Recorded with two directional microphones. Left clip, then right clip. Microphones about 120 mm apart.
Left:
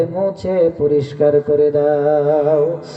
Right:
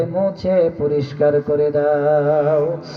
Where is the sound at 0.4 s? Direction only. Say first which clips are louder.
Left 2 dB; 40° left (ahead or behind).